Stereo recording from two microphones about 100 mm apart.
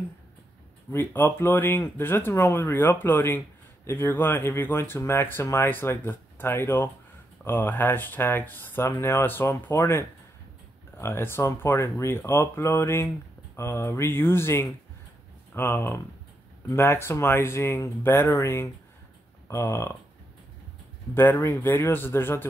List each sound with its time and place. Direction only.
0.9 s speech: 20° left (ahead or behind)
21.1 s speech: 20° left (ahead or behind)